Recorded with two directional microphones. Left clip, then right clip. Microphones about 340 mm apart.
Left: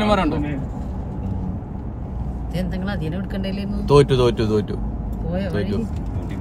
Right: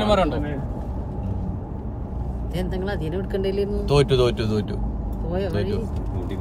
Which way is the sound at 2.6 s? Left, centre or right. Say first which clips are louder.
Even; centre.